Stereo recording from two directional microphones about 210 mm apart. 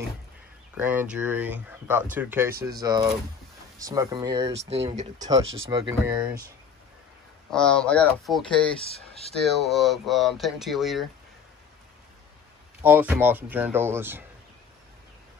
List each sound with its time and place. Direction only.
0.7 s speech: 5° right (ahead or behind); by 4.7 s 30° right (ahead or behind)
5.7 s speech: 15° right (ahead or behind)
6.0 s speech: 5° right (ahead or behind)
7.5 s speech: 5° left (ahead or behind)
8.8 s speech: 30° left (ahead or behind)
9.4 s speech: centre (ahead or behind)
12.8 s speech: 10° right (ahead or behind)